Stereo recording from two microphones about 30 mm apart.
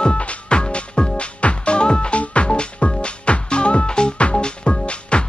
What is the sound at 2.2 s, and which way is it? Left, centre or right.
Music, left.